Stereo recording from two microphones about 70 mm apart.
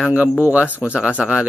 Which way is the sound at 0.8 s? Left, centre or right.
Centre.